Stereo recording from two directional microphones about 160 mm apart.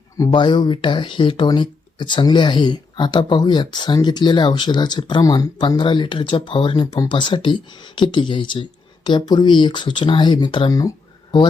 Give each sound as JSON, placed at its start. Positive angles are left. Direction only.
{"t": 0.2, "sound": "speech", "side_deg": 30}